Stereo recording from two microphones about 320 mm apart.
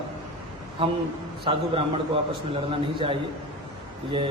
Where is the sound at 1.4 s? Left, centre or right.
Centre.